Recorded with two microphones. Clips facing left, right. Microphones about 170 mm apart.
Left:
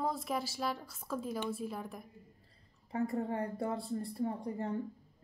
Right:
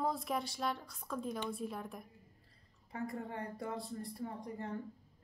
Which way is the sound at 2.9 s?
30° left (ahead or behind).